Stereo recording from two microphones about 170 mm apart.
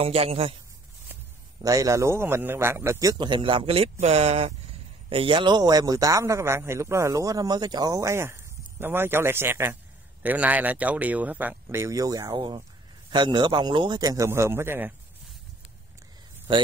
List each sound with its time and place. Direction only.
0.0 s a man's voice: 35° right (ahead or behind)
1.6 s a man's voice: 20° right (ahead or behind)